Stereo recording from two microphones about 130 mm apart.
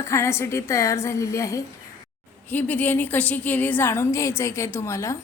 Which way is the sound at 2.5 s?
15° left (ahead or behind).